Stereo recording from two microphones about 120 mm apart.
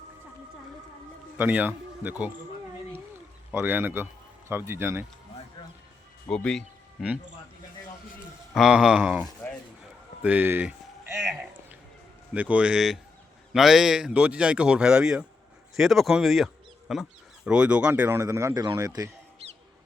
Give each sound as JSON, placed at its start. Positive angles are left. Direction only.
{"t": 1.4, "sound": "speech", "side_deg": -15}
{"t": 3.5, "sound": "speech", "side_deg": -15}
{"t": 6.2, "sound": "speech", "side_deg": 5}
{"t": 8.5, "sound": "speech", "side_deg": -5}
{"t": 10.2, "sound": "a sound", "side_deg": -15}
{"t": 12.3, "sound": "a man's voice", "side_deg": -10}